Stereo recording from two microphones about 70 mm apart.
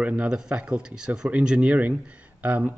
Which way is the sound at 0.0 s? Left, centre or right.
Centre.